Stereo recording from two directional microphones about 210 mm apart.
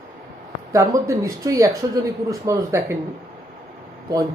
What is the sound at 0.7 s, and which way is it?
Speech, 15° right (ahead or behind).